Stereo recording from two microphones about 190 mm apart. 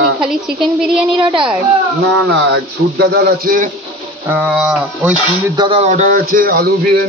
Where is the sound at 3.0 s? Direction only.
55° right (ahead or behind).